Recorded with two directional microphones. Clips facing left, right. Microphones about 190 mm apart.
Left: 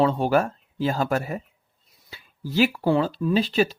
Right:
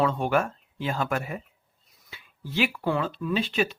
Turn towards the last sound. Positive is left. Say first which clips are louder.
# left 5 dB
turn(degrees=35)  # may be behind; listen again after turning